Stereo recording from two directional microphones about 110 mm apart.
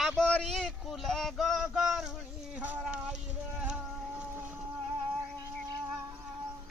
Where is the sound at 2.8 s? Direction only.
10° right (ahead or behind).